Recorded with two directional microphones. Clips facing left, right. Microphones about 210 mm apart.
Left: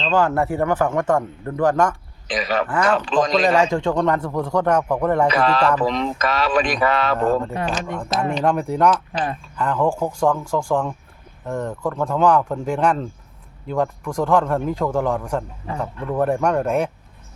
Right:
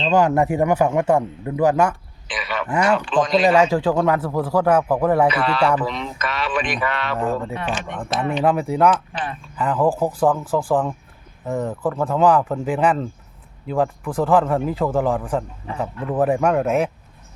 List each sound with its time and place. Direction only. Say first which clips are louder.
0.0 s a man's voice: right 2 dB; 15° right (ahead or behind)
2.2 s a sound: left 5 dB; 40° left (ahead or behind)
2.6 s a man's voice: right 4 dB; 10° right (ahead or behind)
3.1 s speech: left 1 dB; 40° left (ahead or behind)
3.7 s speech: right 1 dB; 5° right (ahead or behind)
5.3 s speech: left 1 dB; 40° left (ahead or behind)
8.4 s speech: right 1 dB; 5° right (ahead or behind)